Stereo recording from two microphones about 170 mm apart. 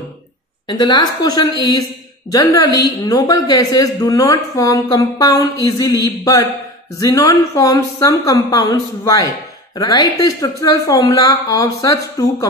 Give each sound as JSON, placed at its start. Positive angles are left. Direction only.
{"t": 0.7, "sound": "a woman's voice", "side_deg": 25}